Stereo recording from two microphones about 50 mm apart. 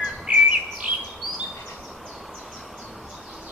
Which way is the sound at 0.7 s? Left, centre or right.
Centre.